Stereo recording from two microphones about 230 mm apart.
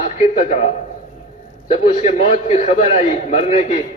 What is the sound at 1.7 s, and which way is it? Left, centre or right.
A man's voice, left.